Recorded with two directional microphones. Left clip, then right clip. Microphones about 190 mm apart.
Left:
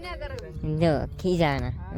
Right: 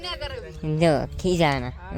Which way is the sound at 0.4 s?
Centre (ahead or behind).